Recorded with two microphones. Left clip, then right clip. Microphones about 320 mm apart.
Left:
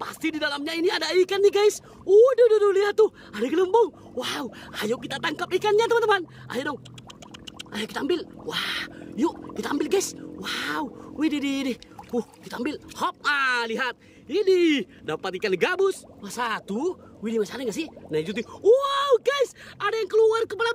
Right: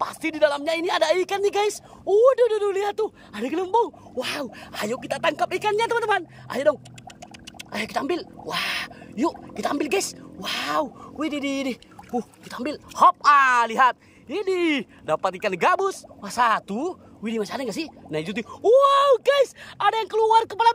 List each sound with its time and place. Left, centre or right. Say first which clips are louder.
0.0 s speech: right 6 dB; centre